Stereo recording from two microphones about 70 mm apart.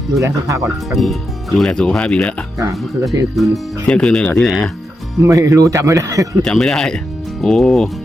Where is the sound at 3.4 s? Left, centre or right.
Centre.